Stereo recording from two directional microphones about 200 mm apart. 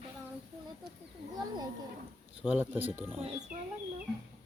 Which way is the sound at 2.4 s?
5° right (ahead or behind).